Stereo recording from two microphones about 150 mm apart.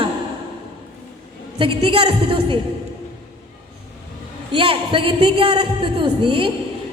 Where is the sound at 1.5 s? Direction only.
35° right (ahead or behind).